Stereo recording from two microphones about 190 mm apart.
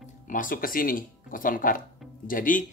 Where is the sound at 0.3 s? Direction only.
45° left (ahead or behind).